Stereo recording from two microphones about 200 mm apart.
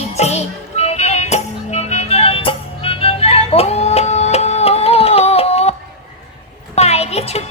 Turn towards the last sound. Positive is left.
turn(degrees=30)  # may be behind; listen again after turning